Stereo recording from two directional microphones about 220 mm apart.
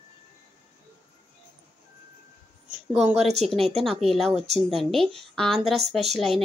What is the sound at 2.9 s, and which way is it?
A woman's voice, centre (ahead or behind).